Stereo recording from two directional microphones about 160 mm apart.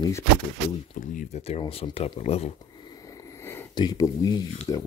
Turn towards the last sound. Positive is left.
turn(degrees=20)  # may be behind; listen again after turning